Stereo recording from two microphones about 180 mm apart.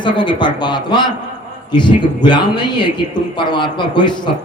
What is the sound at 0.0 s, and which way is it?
A man's voice, 25° left (ahead or behind).